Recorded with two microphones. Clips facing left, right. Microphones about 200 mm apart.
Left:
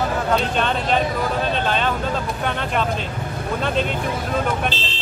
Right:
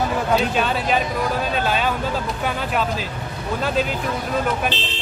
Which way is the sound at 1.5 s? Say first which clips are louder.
Even; 5° right (ahead or behind).